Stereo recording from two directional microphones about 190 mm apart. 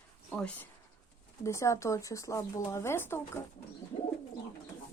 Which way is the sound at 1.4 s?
15° left (ahead or behind).